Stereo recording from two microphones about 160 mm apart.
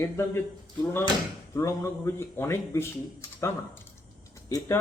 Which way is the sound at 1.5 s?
20° left (ahead or behind).